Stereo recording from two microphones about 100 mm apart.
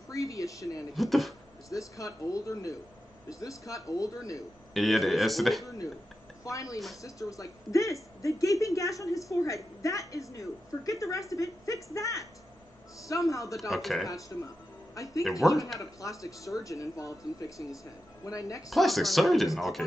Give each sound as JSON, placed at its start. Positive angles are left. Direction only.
{"t": 0.1, "sound": "speech", "side_deg": 35}
{"t": 0.9, "sound": "speech", "side_deg": 0}
{"t": 1.7, "sound": "speech", "side_deg": 35}
{"t": 4.7, "sound": "speech", "side_deg": 0}
{"t": 6.4, "sound": "speech", "side_deg": 35}
{"t": 13.6, "sound": "speech", "side_deg": 0}
{"t": 14.0, "sound": "speech", "side_deg": 35}
{"t": 15.4, "sound": "speech", "side_deg": 0}
{"t": 15.8, "sound": "speech", "side_deg": 35}
{"t": 18.7, "sound": "speech", "side_deg": 0}